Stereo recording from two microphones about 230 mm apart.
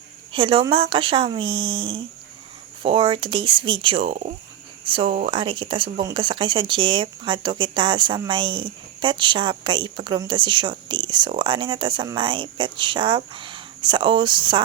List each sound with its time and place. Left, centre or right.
0.3 s speech: right